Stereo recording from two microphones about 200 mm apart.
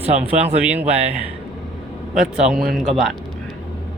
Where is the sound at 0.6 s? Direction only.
10° right (ahead or behind).